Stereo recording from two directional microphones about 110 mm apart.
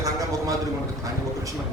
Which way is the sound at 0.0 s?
30° right (ahead or behind).